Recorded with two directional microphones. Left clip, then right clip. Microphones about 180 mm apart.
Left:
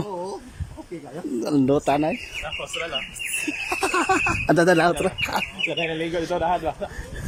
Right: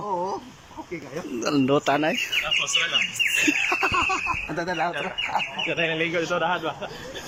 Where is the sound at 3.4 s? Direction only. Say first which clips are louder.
Right 3 dB; 10° left (ahead or behind).